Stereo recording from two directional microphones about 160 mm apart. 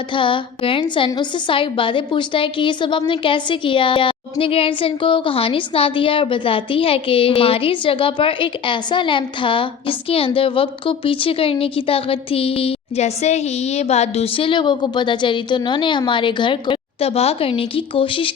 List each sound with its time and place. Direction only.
0.1 s a woman's voice: 30° left (ahead or behind)